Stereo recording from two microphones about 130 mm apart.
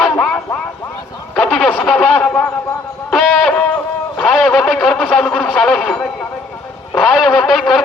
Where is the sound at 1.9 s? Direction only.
10° left (ahead or behind).